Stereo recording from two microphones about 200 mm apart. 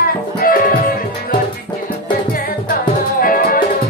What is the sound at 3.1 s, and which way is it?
Music, 45° left (ahead or behind).